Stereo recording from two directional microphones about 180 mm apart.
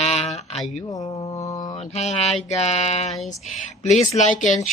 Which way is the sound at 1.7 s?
40° left (ahead or behind).